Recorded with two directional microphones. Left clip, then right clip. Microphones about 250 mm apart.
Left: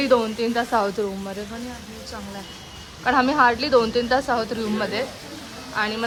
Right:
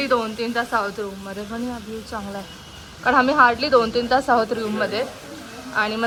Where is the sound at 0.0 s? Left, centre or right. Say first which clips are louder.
Left 2 dB; centre.